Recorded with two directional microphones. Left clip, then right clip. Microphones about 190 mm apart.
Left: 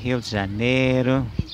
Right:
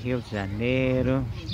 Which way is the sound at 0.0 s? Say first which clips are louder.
Left 5 dB; 45° left (ahead or behind).